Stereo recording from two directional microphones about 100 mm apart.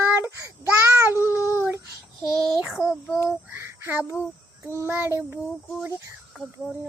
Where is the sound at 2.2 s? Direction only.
5° right (ahead or behind).